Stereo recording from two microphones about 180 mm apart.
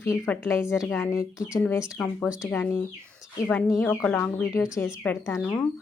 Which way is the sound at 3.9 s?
5° left (ahead or behind).